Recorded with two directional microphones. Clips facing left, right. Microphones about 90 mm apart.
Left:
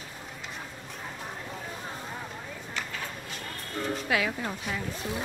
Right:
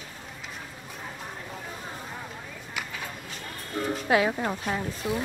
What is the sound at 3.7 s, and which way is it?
Music, 5° right (ahead or behind).